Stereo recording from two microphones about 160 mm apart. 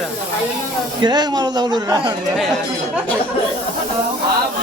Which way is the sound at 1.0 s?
25° right (ahead or behind).